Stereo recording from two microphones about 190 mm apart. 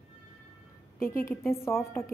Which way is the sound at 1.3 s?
15° left (ahead or behind).